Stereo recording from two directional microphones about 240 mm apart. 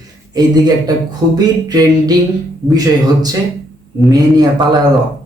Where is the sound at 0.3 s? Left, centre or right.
Centre.